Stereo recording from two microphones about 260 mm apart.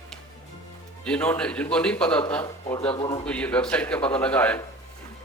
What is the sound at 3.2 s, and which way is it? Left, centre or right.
Speech, centre.